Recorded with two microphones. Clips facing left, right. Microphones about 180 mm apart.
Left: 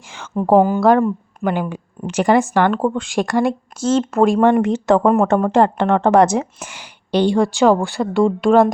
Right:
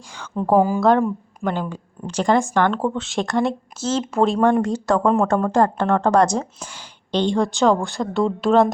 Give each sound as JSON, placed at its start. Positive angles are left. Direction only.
{"t": 0.6, "sound": "speech", "side_deg": 0}
{"t": 4.7, "sound": "speech", "side_deg": 20}